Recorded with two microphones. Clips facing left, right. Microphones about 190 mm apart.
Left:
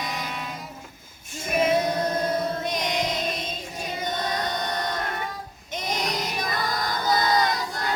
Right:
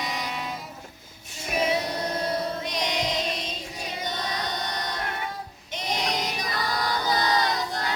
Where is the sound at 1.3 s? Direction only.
50° left (ahead or behind).